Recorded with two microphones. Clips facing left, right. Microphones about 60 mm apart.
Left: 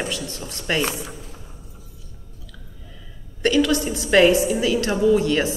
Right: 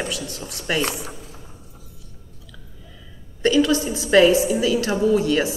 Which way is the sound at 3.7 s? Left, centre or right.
Left.